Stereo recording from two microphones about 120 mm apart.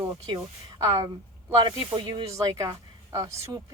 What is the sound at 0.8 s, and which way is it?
A woman's voice, 35° right (ahead or behind).